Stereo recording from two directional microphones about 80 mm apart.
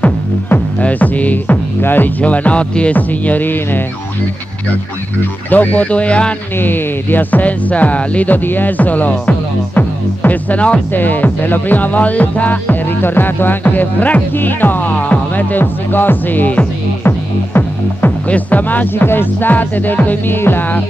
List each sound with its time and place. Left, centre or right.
0.0 s music: centre
5.5 s speech: left
6.6 s speech: left